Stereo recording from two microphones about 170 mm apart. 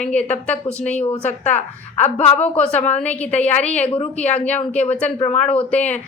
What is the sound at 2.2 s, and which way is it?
A woman's voice, 10° left (ahead or behind).